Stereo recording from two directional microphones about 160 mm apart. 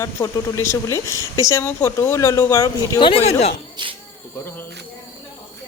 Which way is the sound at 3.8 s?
30° right (ahead or behind).